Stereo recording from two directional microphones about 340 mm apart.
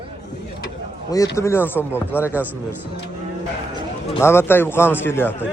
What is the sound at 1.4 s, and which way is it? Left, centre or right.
Speech, centre.